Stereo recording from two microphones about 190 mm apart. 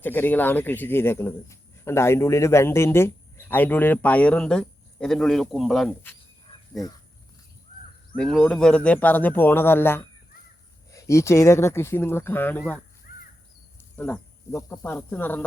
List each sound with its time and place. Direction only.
0.0 s a man's voice: 10° left (ahead or behind)
6.5 s a sound: 30° left (ahead or behind)
8.1 s a man's voice: 5° left (ahead or behind)
13.1 s crow: 50° left (ahead or behind)
13.9 s a man's voice: 10° left (ahead or behind)